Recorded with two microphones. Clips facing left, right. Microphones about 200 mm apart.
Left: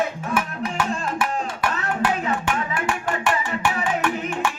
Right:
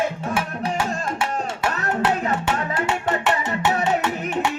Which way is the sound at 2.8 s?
20° right (ahead or behind).